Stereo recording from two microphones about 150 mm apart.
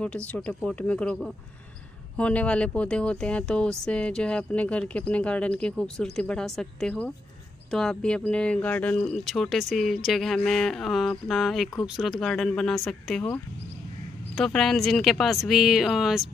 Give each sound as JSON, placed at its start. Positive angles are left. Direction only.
{"t": 0.0, "sound": "speech", "side_deg": 10}
{"t": 14.3, "sound": "speech", "side_deg": 5}